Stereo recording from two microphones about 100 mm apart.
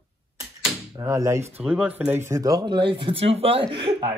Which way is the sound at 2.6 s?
50° right (ahead or behind).